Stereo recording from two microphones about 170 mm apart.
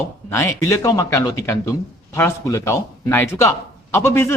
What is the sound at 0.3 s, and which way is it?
A man's voice, 15° left (ahead or behind).